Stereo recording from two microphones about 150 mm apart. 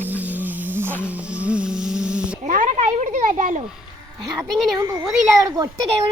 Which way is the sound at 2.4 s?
60° right (ahead or behind).